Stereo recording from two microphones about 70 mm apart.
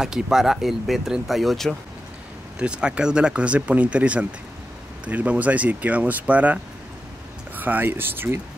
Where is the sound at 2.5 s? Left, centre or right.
Centre.